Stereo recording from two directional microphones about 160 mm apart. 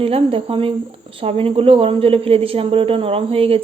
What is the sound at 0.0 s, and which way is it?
A woman's voice, 35° right (ahead or behind).